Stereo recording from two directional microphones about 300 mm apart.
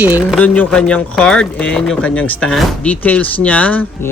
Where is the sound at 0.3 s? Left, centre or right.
Centre.